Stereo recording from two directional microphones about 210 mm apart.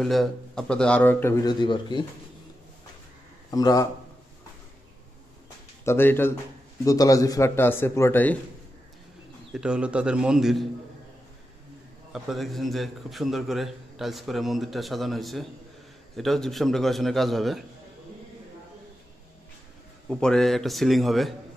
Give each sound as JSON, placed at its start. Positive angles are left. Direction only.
{"t": 0.0, "sound": "a man's voice", "side_deg": 0}
{"t": 3.5, "sound": "a man's voice", "side_deg": 15}
{"t": 5.9, "sound": "a man's voice", "side_deg": 10}
{"t": 9.5, "sound": "a man's voice", "side_deg": -5}
{"t": 12.1, "sound": "a man's voice", "side_deg": 0}
{"t": 20.1, "sound": "a man's voice", "side_deg": 5}